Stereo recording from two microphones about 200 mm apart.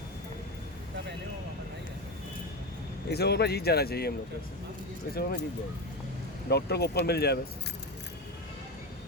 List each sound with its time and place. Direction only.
3.1 s a man's voice: 55° left (ahead or behind)
5.1 s a man's voice: 50° left (ahead or behind)
6.5 s a man's voice: 55° left (ahead or behind)